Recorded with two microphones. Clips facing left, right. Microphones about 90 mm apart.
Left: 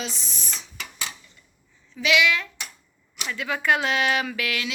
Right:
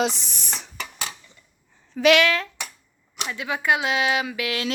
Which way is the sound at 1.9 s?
55° right (ahead or behind).